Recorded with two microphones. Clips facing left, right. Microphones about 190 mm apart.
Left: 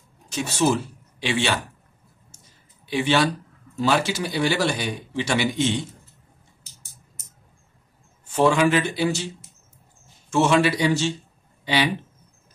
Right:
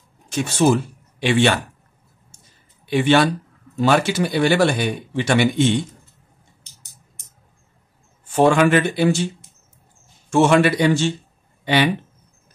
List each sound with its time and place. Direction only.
0.3 s speech: 55° right (ahead or behind)
2.9 s speech: 55° right (ahead or behind)
6.6 s a sound: 5° left (ahead or behind)
8.4 s speech: 55° right (ahead or behind)
10.3 s speech: 55° right (ahead or behind)